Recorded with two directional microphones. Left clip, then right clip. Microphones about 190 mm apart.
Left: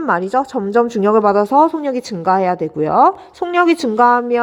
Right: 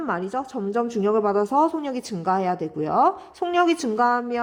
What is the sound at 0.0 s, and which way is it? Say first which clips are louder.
Speech: left 10 dB; 35° left (ahead or behind).